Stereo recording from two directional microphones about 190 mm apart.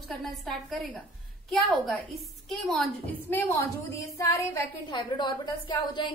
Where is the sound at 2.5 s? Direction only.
Centre (ahead or behind).